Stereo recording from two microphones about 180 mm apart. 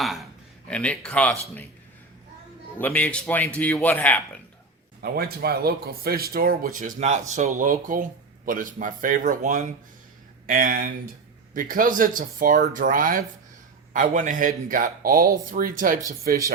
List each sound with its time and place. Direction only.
0.0 s a man's voice: centre (ahead or behind)
2.7 s a man's voice: 10° left (ahead or behind)
5.0 s speech: 60° right (ahead or behind)